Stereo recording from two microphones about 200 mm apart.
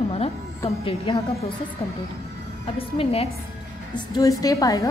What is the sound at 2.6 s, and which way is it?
Speech, 30° left (ahead or behind).